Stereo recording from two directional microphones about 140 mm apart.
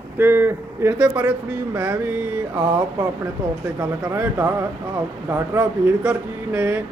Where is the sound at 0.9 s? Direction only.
10° right (ahead or behind).